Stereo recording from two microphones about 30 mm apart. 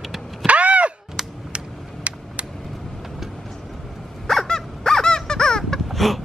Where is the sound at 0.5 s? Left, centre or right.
Right.